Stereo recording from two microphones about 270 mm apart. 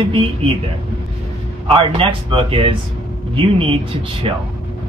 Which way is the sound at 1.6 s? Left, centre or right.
Centre.